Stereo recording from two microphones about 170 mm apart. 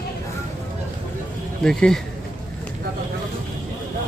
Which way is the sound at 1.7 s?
5° left (ahead or behind).